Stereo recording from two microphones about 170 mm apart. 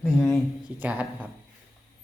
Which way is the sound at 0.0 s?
Centre (ahead or behind).